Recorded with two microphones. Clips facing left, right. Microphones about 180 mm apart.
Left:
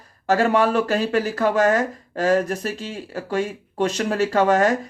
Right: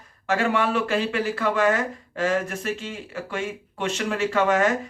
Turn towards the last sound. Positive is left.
turn(degrees=40)  # may be behind; listen again after turning